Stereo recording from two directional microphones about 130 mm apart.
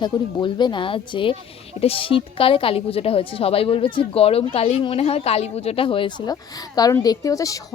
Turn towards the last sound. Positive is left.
turn(degrees=25)  # may be behind; listen again after turning